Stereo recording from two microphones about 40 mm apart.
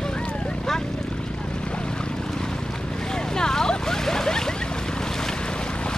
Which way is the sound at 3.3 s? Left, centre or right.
Centre.